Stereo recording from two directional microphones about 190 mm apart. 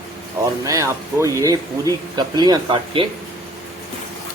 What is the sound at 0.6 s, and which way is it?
Speech, 15° right (ahead or behind).